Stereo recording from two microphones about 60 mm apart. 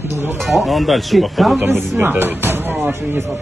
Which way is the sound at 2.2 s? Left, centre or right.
Right.